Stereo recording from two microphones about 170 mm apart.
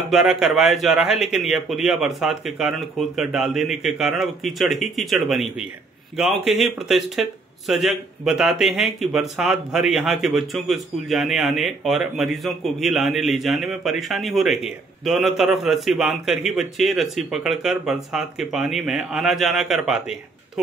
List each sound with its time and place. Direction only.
0.1 s speech: centre (ahead or behind)